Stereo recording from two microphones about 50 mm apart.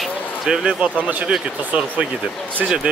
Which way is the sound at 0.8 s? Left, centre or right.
Right.